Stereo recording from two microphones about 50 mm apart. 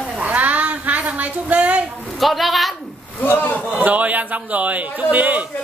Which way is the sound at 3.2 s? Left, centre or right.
Left.